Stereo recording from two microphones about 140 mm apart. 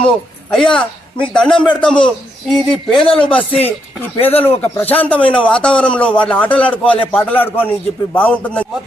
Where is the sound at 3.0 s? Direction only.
40° left (ahead or behind).